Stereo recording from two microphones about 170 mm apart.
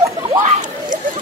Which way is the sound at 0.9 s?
50° right (ahead or behind).